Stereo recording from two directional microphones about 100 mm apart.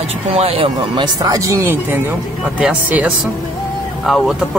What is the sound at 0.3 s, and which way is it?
Speech, 85° right.